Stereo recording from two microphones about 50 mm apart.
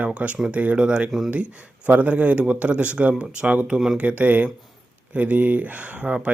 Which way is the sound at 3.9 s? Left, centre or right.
Right.